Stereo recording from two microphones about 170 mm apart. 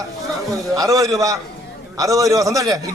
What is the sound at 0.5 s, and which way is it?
A man's voice, 20° right (ahead or behind).